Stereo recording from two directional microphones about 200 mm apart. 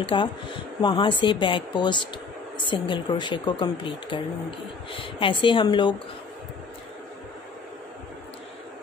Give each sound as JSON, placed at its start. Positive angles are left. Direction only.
{"t": 0.0, "sound": "speech", "side_deg": 25}